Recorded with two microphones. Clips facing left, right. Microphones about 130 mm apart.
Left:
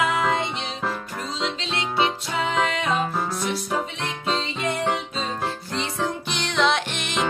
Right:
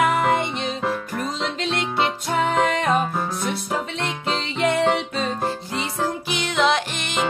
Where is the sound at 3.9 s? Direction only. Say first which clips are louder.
Right 1 dB; 70° right (ahead or behind).